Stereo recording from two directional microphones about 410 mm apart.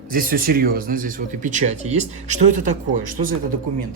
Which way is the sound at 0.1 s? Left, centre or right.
Right.